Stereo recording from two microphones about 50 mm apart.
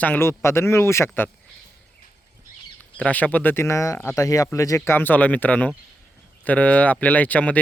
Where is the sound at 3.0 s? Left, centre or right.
Left.